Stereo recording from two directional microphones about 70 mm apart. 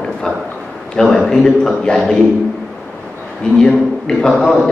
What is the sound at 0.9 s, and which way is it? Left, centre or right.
A man's voice, centre.